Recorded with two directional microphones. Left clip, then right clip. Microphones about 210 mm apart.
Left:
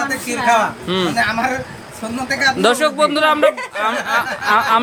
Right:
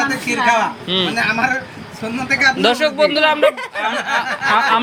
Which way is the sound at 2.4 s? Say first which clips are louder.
Left 1 dB; 20° left (ahead or behind).